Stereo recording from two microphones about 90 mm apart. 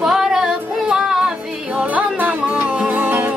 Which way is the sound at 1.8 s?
15° right (ahead or behind).